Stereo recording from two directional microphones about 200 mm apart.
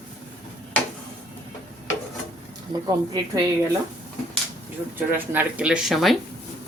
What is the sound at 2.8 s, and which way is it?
Speech, 20° right (ahead or behind).